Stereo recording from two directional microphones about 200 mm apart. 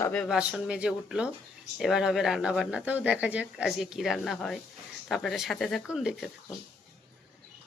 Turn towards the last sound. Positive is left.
turn(degrees=-5)  # may be behind; listen again after turning